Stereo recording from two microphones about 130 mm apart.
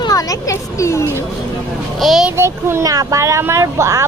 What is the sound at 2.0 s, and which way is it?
Speech, centre (ahead or behind).